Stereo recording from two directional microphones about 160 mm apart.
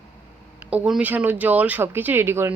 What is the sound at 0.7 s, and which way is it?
Speech, 5° right (ahead or behind).